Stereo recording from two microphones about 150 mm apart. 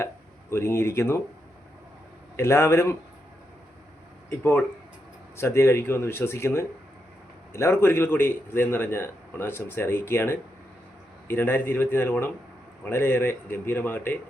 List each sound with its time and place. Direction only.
0.5 s a man's voice: 20° left (ahead or behind)
2.3 s a man's voice: 15° left (ahead or behind)
4.3 s a man's voice: 15° left (ahead or behind)